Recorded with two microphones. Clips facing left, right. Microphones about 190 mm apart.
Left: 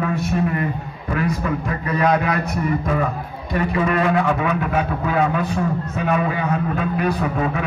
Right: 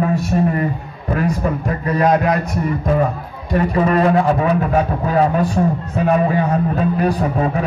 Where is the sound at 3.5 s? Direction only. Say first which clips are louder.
Right 4 dB; 40° right (ahead or behind).